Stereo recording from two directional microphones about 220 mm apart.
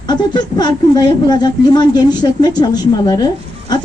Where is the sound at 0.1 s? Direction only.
20° left (ahead or behind).